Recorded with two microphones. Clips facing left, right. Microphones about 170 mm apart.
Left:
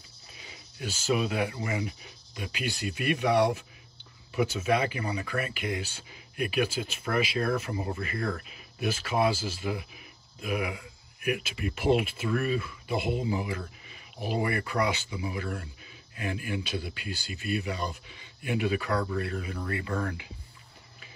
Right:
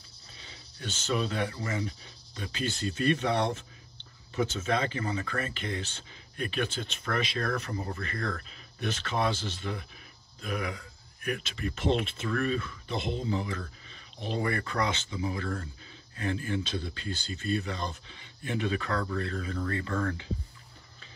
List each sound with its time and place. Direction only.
0.7 s speech: 10° left (ahead or behind)
15.2 s speech: 35° right (ahead or behind)
16.2 s speech: 15° left (ahead or behind)